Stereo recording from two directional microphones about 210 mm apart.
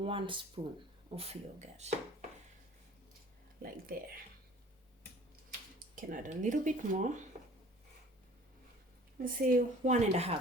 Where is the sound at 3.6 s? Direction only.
45° right (ahead or behind).